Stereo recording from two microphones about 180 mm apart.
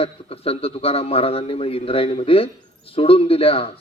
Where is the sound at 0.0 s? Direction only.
30° left (ahead or behind).